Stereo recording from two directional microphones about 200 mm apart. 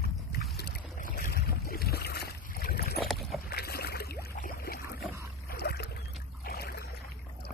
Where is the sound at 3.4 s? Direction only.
50° left (ahead or behind).